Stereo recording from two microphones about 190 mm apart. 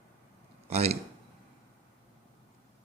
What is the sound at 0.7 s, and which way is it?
Speech, 35° right (ahead or behind).